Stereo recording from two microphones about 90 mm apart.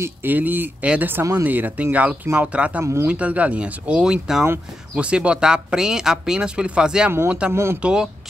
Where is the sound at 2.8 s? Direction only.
30° right (ahead or behind).